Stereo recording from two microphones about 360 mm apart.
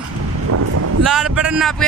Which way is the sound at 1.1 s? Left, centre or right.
Centre.